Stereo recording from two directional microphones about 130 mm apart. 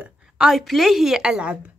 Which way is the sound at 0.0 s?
5° right (ahead or behind).